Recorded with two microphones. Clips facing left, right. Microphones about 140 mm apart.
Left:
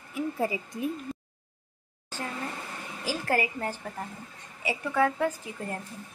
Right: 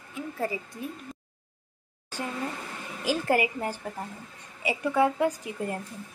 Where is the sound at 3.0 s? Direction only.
15° right (ahead or behind).